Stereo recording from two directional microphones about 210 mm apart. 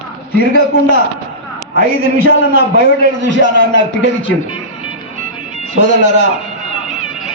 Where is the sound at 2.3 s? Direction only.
60° left (ahead or behind).